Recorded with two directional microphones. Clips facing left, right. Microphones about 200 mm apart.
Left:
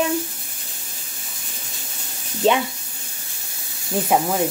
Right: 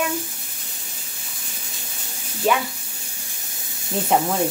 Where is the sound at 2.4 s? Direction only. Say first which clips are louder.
Left 3 dB; 25° left (ahead or behind).